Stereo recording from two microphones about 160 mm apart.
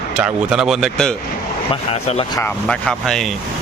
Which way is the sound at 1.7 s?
40° left (ahead or behind).